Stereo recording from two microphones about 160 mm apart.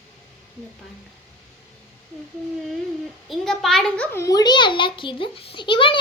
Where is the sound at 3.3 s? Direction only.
Centre (ahead or behind).